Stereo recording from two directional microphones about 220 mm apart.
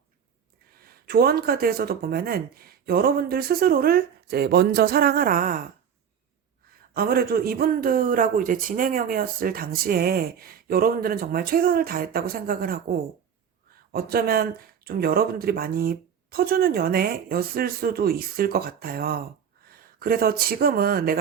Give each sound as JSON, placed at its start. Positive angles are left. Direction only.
{"t": 0.7, "sound": "speech", "side_deg": -45}
{"t": 6.9, "sound": "a man's voice", "side_deg": -40}
{"t": 13.9, "sound": "speech", "side_deg": -45}